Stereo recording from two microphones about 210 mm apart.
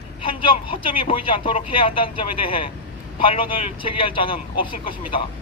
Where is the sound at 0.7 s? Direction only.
25° left (ahead or behind).